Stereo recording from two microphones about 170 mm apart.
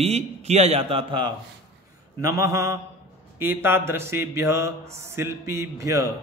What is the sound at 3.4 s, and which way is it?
Mantra, 15° right (ahead or behind).